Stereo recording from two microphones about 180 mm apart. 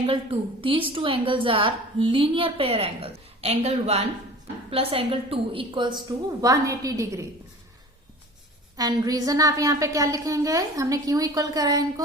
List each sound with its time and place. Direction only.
0.0 s a woman's voice: 30° right (ahead or behind)
8.7 s a woman's voice: 20° right (ahead or behind)